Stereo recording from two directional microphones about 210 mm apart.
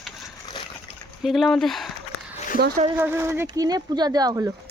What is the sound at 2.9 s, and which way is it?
Speech, 10° right (ahead or behind).